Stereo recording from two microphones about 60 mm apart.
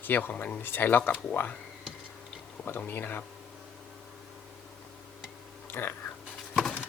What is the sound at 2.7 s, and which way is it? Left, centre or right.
Speech, left.